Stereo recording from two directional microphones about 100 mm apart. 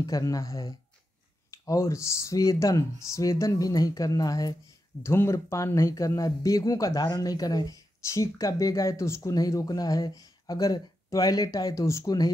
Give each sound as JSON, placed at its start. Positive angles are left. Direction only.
{"t": 0.0, "sound": "speech", "side_deg": 35}
{"t": 5.0, "sound": "speech", "side_deg": 25}